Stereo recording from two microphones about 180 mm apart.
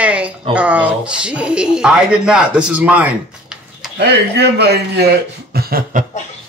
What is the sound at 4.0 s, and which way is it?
A man's voice, 65° right (ahead or behind).